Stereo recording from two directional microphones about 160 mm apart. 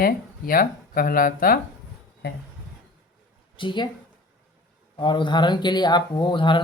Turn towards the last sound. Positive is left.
turn(degrees=30)  # may be behind; listen again after turning